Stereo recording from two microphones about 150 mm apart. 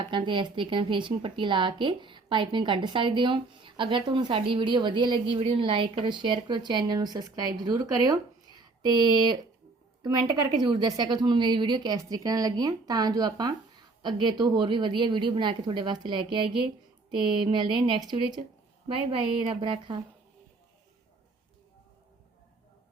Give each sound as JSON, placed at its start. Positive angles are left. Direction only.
{"t": 0.1, "sound": "a woman's voice", "side_deg": -35}
{"t": 10.6, "sound": "a woman's voice", "side_deg": -30}